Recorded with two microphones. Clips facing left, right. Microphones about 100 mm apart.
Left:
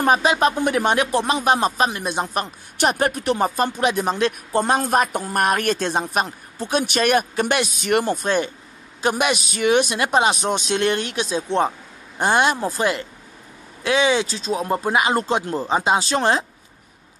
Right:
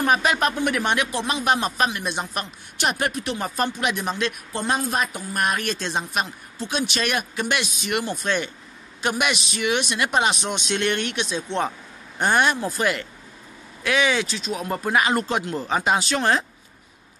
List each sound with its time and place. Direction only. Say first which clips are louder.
0.0 s speech: left 3 dB; 30° left (ahead or behind); by 3.4 s 45° left (ahead or behind)
3.4 s speech: left 1 dB; 35° left (ahead or behind)